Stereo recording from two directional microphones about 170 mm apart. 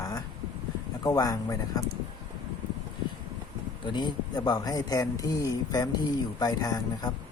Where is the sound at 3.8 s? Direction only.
25° left (ahead or behind).